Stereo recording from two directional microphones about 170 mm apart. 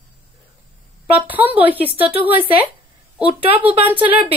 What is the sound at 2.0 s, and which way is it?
Speech, 35° right (ahead or behind).